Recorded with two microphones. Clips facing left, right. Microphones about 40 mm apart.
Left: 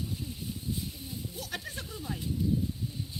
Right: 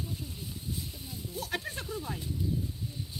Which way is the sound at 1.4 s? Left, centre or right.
Right.